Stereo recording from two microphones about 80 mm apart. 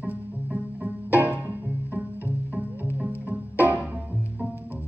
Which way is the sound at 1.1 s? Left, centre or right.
Right.